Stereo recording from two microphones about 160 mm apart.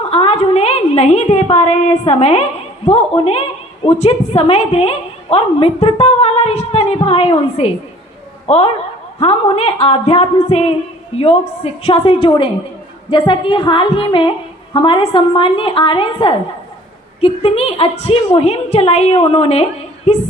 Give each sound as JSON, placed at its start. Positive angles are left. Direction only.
{"t": 0.1, "sound": "a woman's voice", "side_deg": 35}